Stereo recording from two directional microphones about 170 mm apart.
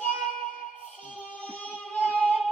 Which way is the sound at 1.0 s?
10° left (ahead or behind).